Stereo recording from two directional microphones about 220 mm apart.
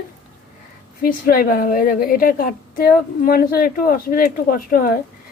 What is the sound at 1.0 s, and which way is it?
A woman's voice, 40° left (ahead or behind).